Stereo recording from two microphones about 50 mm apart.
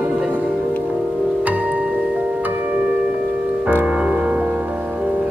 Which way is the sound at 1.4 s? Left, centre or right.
Right.